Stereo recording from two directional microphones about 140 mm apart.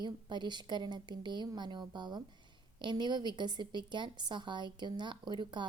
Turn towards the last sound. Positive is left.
turn(degrees=-35)  # may be behind; listen again after turning